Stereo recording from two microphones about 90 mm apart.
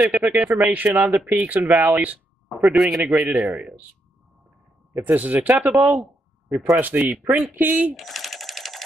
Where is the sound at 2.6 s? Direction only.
5° right (ahead or behind).